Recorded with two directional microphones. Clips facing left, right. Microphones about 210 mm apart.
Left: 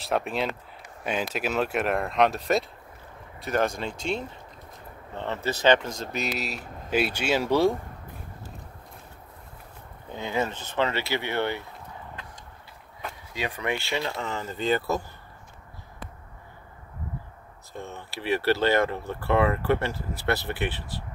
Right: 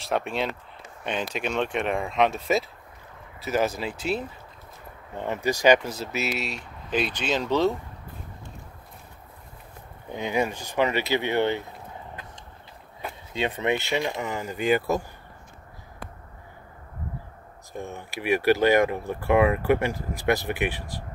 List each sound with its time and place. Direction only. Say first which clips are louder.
0.0 s speech: even; centre (ahead or behind)
10.0 s speech: right 2 dB; 15° right (ahead or behind)
13.3 s speech: right 4 dB; 25° right (ahead or behind)
17.7 s speech: right 3 dB; 15° right (ahead or behind)